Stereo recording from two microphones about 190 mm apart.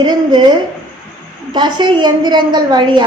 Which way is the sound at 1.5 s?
25° right (ahead or behind).